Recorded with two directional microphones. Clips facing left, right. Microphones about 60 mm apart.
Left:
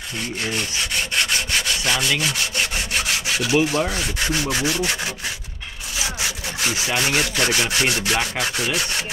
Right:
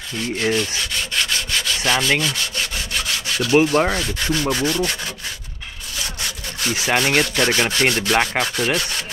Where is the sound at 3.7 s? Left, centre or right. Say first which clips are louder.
Right 5 dB; right.